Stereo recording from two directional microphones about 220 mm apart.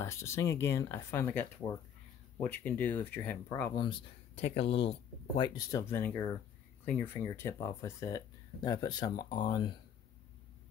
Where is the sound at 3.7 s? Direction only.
20° left (ahead or behind).